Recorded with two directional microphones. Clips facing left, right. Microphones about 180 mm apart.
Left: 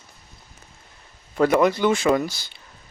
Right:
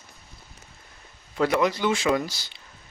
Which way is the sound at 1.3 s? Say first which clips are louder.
Left 5 dB; 50° left (ahead or behind).